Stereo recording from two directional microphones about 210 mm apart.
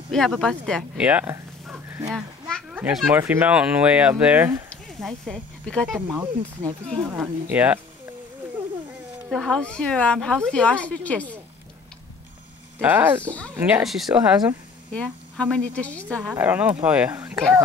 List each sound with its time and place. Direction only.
0.1 s speech: centre (ahead or behind)
4.6 s speech: centre (ahead or behind)
5.9 s speech: 10° right (ahead or behind)
9.3 s a woman's voice: centre (ahead or behind)
12.8 s speech: 10° right (ahead or behind)
13.2 s speech: 5° left (ahead or behind)
13.7 s a woman's voice: 5° right (ahead or behind)
16.3 s speech: 10° right (ahead or behind)